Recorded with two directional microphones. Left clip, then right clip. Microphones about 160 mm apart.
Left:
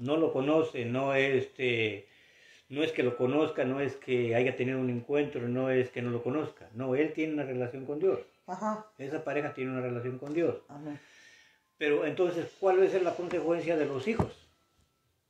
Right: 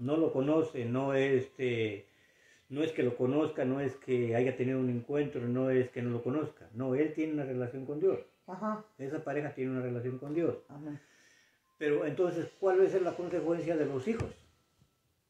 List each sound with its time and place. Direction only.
0.0 s speech: centre (ahead or behind)
9.0 s speech: 20° left (ahead or behind)
9.3 s speech: 5° left (ahead or behind)
11.8 s speech: centre (ahead or behind)